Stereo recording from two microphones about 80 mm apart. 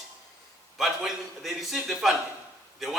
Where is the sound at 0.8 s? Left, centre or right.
Centre.